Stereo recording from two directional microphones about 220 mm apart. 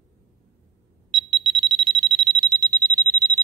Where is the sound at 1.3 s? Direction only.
20° right (ahead or behind).